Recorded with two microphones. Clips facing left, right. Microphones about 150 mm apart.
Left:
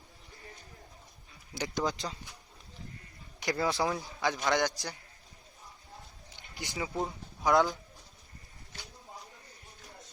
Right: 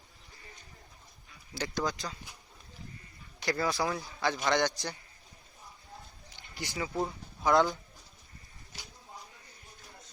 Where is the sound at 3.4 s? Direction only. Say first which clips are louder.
Left 1 dB; 15° left (ahead or behind).